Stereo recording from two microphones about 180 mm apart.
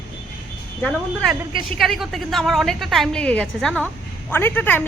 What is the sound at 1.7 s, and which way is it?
A woman's voice, centre (ahead or behind).